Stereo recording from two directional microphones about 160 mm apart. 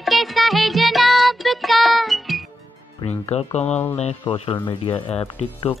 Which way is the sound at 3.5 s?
45° left (ahead or behind).